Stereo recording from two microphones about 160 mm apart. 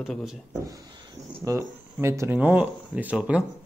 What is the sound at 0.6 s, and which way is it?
Speech, 20° right (ahead or behind).